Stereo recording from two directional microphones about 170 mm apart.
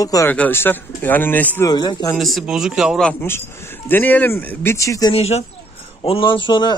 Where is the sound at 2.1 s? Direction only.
Centre (ahead or behind); by 5.1 s 20° left (ahead or behind).